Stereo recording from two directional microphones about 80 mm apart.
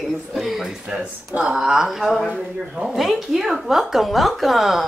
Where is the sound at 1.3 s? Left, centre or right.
Centre.